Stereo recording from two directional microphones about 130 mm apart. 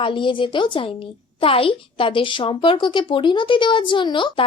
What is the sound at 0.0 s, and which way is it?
A child's voice, 40° left (ahead or behind).